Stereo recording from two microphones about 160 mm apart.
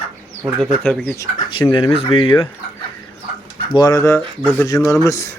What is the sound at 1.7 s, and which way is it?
Speech, 35° left (ahead or behind).